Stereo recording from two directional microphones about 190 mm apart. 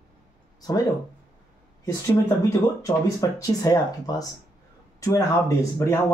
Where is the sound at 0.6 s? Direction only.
20° left (ahead or behind).